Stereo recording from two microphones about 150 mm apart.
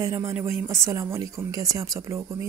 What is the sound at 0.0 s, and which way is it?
Speech, 15° right (ahead or behind).